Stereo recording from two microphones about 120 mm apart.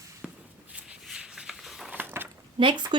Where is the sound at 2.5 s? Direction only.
40° right (ahead or behind).